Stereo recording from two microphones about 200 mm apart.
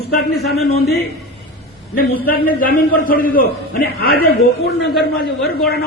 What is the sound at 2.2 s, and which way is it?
A man's voice, 45° left (ahead or behind).